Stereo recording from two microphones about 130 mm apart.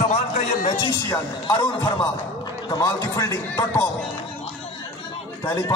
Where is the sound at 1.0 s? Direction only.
20° left (ahead or behind).